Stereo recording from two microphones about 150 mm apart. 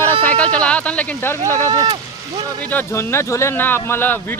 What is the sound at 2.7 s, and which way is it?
Speech, 15° left (ahead or behind).